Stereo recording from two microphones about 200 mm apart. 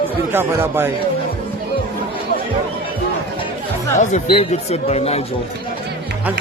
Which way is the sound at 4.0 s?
35° left (ahead or behind).